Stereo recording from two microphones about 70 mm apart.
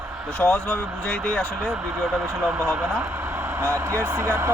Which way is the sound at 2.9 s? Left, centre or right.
Right.